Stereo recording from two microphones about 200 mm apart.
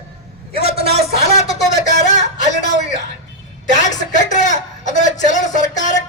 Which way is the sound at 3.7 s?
40° left (ahead or behind).